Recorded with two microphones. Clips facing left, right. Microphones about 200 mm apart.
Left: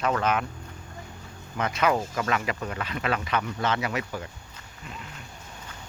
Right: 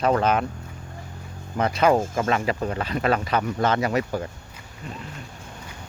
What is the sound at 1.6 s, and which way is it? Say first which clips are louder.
Speech: right 5 dB; 35° right (ahead or behind).